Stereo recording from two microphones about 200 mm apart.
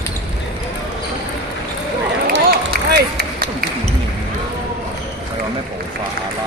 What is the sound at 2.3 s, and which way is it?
Run, 55° right (ahead or behind).